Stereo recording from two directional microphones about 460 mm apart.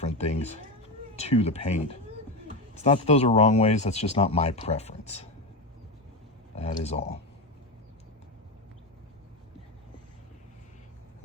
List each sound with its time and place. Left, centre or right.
0.0 s cat: centre
1.1 s speech: centre
6.6 s speech: centre